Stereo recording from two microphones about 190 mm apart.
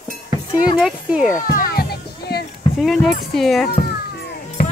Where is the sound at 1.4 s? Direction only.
50° left (ahead or behind).